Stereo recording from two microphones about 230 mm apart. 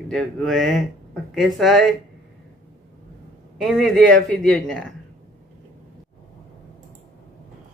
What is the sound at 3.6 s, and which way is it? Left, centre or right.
Female singing, centre.